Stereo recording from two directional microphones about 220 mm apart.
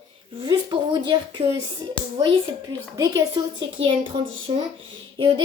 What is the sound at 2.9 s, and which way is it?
A woman's voice, 15° right (ahead or behind).